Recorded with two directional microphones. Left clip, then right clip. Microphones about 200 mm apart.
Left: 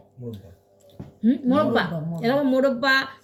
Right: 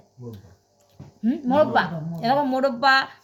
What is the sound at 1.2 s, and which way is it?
A woman's voice, 60° right (ahead or behind).